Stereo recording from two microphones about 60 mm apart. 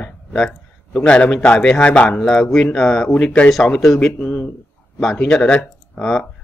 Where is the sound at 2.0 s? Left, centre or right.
Centre.